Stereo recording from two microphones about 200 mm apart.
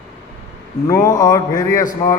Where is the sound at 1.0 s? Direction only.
20° left (ahead or behind).